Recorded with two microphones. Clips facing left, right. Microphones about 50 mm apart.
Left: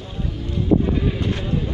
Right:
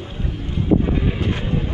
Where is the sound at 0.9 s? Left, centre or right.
Right.